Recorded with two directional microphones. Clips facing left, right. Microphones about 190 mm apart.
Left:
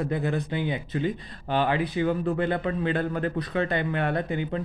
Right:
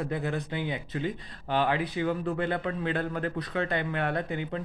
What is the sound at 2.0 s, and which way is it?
Speech, 25° left (ahead or behind).